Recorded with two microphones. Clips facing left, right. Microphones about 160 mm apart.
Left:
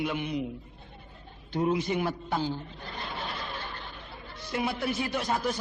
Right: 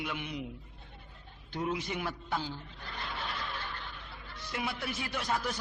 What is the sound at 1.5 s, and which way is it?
A man's voice, 30° left (ahead or behind).